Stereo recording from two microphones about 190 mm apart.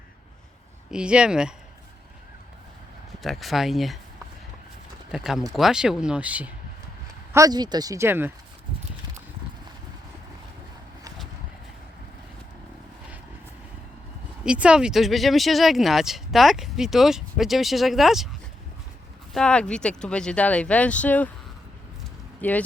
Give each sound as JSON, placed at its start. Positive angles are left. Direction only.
{"t": 0.9, "sound": "speech", "side_deg": -5}
{"t": 3.2, "sound": "speech", "side_deg": 0}
{"t": 5.1, "sound": "speech", "side_deg": 0}
{"t": 7.3, "sound": "speech", "side_deg": -20}
{"t": 14.4, "sound": "speech", "side_deg": -5}
{"t": 19.3, "sound": "speech", "side_deg": 5}
{"t": 22.4, "sound": "speech", "side_deg": 10}